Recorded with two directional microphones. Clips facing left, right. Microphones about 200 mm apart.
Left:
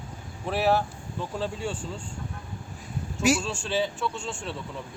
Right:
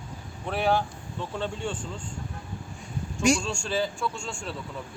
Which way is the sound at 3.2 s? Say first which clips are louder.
Even; 5° left (ahead or behind).